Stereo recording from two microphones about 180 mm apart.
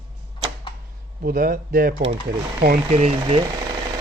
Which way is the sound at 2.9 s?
35° right (ahead or behind).